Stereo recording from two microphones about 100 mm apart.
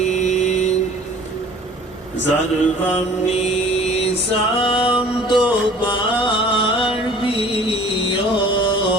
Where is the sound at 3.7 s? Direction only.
90° left.